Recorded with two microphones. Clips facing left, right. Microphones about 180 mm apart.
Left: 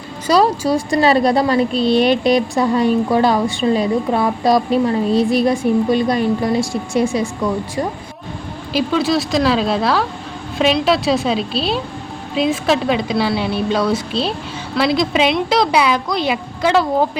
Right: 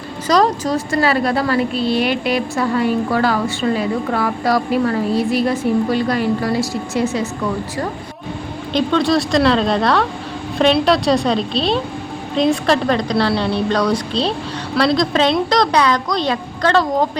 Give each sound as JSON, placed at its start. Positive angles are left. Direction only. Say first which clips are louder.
{"t": 0.3, "sound": "a woman's voice", "louder": "left 1 dB", "side_deg": 10}
{"t": 8.7, "sound": "a woman's voice", "louder": "right 1 dB", "side_deg": 5}